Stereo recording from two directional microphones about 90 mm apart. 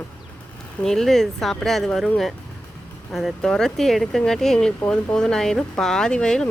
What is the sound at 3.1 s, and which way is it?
Speech, 5° left (ahead or behind).